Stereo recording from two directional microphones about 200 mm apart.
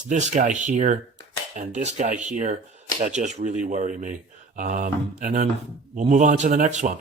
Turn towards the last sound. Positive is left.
turn(degrees=-40)  # may be behind; listen again after turning